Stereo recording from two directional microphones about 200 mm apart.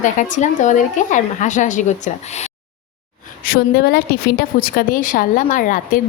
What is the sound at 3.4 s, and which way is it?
A woman's voice, 50° left (ahead or behind).